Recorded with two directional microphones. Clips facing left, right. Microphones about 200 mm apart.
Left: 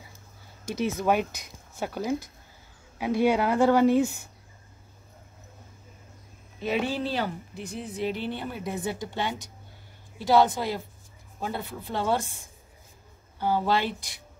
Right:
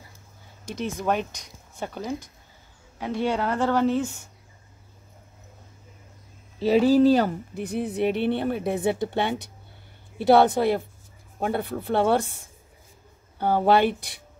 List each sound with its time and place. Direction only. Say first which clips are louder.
1.0 s speech: even; 5° left (ahead or behind)
6.6 s speech: right 11 dB; 35° right (ahead or behind); by 12.4 s 60° right (ahead or behind)
13.4 s speech: right 6 dB; 55° right (ahead or behind)